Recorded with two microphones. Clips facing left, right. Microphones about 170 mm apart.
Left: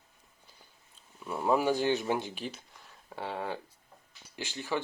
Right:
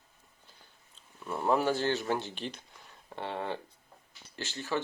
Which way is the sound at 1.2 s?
5° left (ahead or behind).